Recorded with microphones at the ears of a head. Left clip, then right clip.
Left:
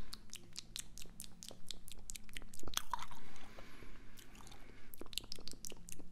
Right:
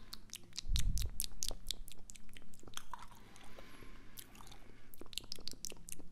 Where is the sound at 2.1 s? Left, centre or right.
Left.